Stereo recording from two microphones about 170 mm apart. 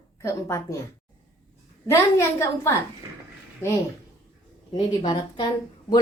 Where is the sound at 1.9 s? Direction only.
15° left (ahead or behind).